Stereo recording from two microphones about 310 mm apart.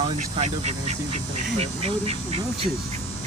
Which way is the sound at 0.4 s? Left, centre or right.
Right.